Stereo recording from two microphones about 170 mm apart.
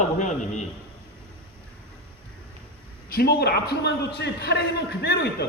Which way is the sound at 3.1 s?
65° left (ahead or behind).